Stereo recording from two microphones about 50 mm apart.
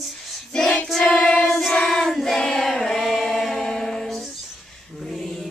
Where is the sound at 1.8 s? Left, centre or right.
Centre.